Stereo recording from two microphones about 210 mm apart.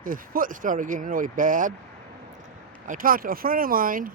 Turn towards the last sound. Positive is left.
turn(degrees=-40)  # may be behind; listen again after turning